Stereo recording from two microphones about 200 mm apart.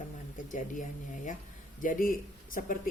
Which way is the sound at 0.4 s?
40° left (ahead or behind).